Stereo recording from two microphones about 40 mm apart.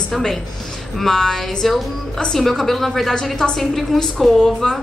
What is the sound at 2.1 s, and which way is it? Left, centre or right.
A woman's voice, centre.